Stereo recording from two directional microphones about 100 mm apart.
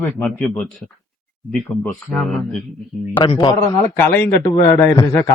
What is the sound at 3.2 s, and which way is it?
Speech, 50° left (ahead or behind).